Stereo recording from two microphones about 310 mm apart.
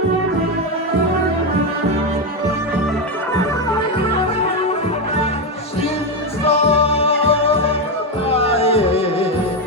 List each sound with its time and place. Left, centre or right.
6.4 s music: centre